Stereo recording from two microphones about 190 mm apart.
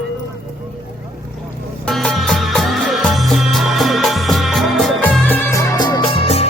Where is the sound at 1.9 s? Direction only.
Centre (ahead or behind).